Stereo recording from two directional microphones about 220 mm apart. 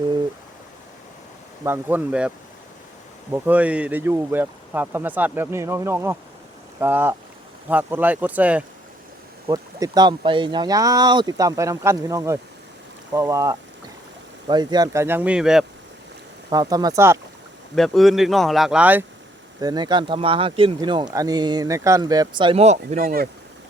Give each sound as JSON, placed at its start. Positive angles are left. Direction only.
{"t": 1.6, "sound": "speech", "side_deg": -10}
{"t": 3.3, "sound": "speech", "side_deg": -10}
{"t": 9.5, "sound": "speech", "side_deg": -15}
{"t": 16.5, "sound": "speech", "side_deg": -15}
{"t": 17.7, "sound": "speech", "side_deg": 0}
{"t": 19.5, "sound": "speech", "side_deg": -15}